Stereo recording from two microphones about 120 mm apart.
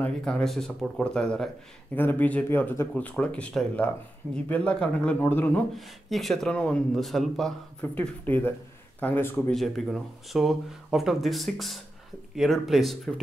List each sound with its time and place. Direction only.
0.0 s speech: 5° left (ahead or behind)
5.8 s speech: centre (ahead or behind)
7.8 s speech: 15° left (ahead or behind)
9.5 s speech: centre (ahead or behind)